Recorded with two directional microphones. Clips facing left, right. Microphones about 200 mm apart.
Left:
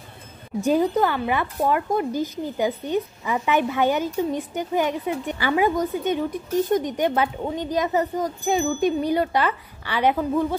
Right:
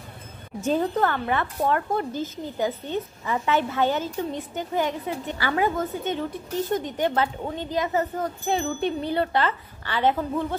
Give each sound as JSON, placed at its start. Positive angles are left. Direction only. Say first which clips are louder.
{"t": 0.7, "sound": "a woman's voice", "louder": "left 3 dB", "side_deg": 10}